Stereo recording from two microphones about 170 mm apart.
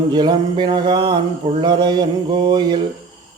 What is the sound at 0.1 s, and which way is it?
Mantra, 25° right (ahead or behind).